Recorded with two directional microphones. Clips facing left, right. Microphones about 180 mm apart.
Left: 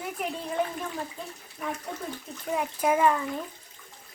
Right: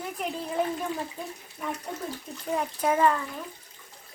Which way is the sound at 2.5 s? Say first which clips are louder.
Left 1 dB; 5° left (ahead or behind).